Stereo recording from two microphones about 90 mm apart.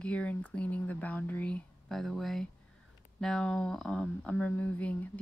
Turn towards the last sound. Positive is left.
turn(degrees=15)  # may be behind; listen again after turning